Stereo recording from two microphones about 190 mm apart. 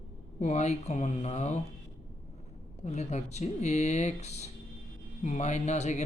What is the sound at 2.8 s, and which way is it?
Speech, 35° left (ahead or behind).